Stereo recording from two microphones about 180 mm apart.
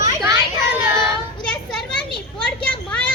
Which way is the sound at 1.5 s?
5° left (ahead or behind).